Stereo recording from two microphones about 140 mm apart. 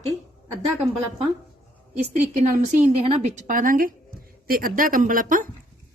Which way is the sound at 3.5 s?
75° right (ahead or behind).